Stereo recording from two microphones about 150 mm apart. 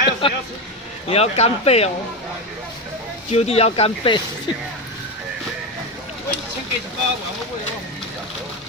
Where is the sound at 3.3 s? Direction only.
45° left (ahead or behind).